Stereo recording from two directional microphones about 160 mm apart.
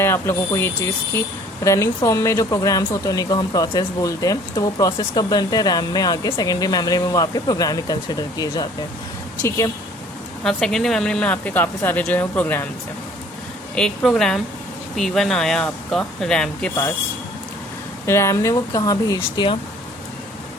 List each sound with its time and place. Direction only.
0.0 s speech: 15° left (ahead or behind)
10.4 s speech: 5° left (ahead or behind)
13.7 s speech: 5° left (ahead or behind)
18.0 s speech: 15° left (ahead or behind)